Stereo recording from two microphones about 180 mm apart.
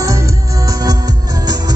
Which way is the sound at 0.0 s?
15° right (ahead or behind).